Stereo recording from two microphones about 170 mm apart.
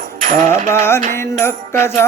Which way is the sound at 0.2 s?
45° right (ahead or behind).